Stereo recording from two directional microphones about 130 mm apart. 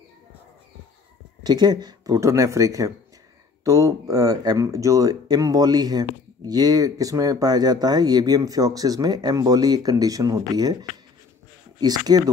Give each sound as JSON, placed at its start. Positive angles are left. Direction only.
{"t": 1.4, "sound": "speech", "side_deg": -35}